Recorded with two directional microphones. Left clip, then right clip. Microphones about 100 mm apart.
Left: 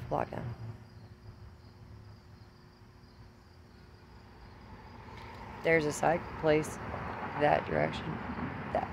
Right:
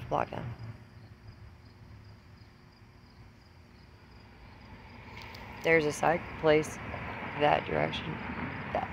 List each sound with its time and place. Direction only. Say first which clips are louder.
0.1 s speech: right 2 dB; 10° left (ahead or behind)
5.5 s speech: right 2 dB; 25° left (ahead or behind)
6.8 s a sound: even; 40° left (ahead or behind)
7.3 s speech: right 1 dB; 15° left (ahead or behind)
8.1 s vehicle: right 1 dB; 40° left (ahead or behind)